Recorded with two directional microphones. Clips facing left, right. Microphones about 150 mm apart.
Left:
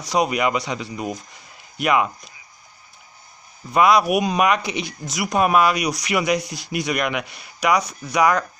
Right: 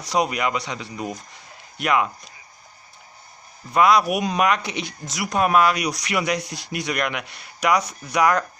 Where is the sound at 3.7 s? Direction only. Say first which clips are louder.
Left 1 dB; 5° left (ahead or behind).